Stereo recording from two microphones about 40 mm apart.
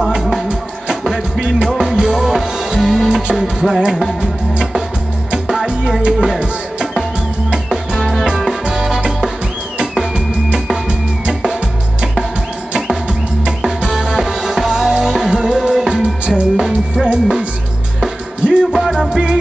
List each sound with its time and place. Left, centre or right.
0.8 s music: centre
5.5 s music: centre
7.5 s music: centre
10.1 s music: right
13.7 s music: centre
17.0 s music: right
18.7 s music: centre